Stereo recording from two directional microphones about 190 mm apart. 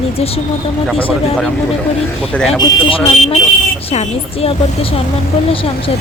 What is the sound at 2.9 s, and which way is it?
Speech, 30° left (ahead or behind).